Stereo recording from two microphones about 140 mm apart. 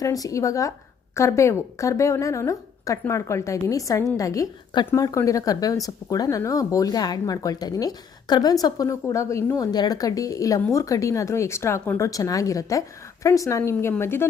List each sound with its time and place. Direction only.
0.0 s a woman's voice: 25° left (ahead or behind)